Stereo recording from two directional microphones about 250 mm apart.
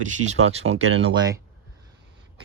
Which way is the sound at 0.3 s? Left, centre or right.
Right.